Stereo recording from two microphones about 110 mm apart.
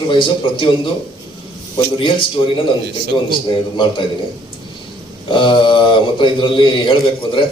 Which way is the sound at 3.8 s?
50° left (ahead or behind).